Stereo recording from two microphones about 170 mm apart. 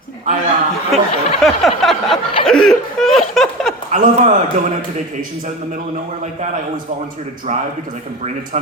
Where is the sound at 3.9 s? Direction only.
45° right (ahead or behind).